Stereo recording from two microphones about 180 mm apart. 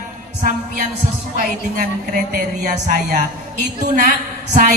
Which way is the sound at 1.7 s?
50° right (ahead or behind).